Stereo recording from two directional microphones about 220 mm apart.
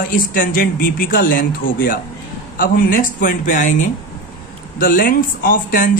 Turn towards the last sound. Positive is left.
turn(degrees=40)  # may be behind; listen again after turning